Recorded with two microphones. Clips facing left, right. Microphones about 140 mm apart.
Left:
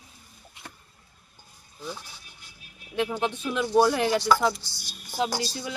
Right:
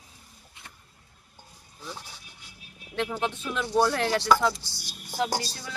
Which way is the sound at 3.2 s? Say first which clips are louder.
Left 3 dB; 15° left (ahead or behind).